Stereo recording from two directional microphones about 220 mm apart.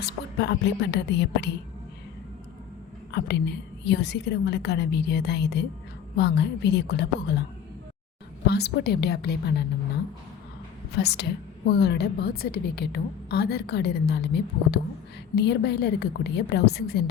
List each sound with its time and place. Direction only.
0.0 s a woman's voice: 50° left (ahead or behind)
3.1 s a woman's voice: 50° left (ahead or behind)
8.4 s a woman's voice: 45° left (ahead or behind)
10.9 s a woman's voice: 50° left (ahead or behind)